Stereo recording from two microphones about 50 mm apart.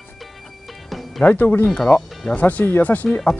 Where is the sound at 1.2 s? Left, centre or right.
Left.